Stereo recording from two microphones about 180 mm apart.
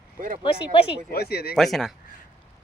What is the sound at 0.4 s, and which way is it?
Speech, 30° left (ahead or behind).